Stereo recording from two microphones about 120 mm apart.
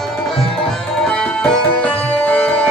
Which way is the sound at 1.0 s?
5° left (ahead or behind).